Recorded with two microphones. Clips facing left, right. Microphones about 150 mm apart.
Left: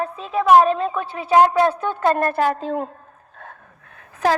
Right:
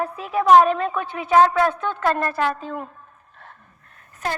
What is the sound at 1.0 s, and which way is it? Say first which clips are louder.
Speech: even; 30° left (ahead or behind).